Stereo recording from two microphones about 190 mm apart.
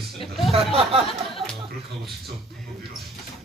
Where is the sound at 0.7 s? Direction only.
30° right (ahead or behind).